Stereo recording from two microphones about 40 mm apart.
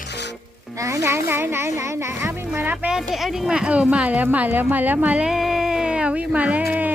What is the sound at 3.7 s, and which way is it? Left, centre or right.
A woman's voice, right.